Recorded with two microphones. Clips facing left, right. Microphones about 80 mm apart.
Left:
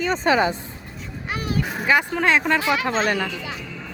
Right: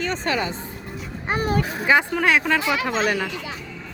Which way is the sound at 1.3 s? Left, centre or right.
Right.